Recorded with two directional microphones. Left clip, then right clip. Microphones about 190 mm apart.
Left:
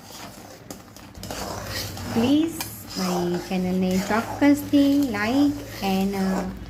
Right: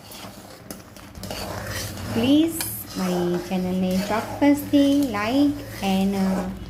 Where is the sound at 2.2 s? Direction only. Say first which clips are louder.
Right 2 dB; 5° right (ahead or behind).